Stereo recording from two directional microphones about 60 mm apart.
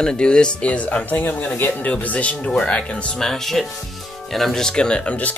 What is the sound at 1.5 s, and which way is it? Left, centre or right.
Music, left.